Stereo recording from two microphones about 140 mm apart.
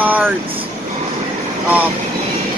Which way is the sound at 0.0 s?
10° right (ahead or behind).